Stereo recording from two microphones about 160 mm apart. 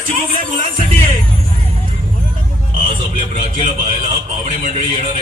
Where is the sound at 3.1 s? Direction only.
55° right (ahead or behind).